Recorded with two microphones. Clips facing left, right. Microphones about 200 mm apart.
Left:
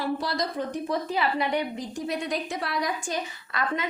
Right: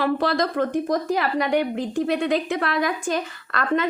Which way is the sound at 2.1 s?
75° right (ahead or behind).